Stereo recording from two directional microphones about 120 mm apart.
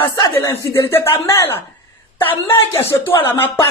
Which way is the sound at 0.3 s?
20° left (ahead or behind).